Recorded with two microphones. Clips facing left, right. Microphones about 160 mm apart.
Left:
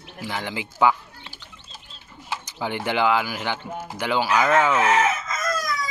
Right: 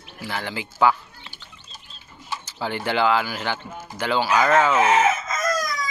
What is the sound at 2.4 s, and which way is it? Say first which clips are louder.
Speech: right 1 dB; 15° left (ahead or behind).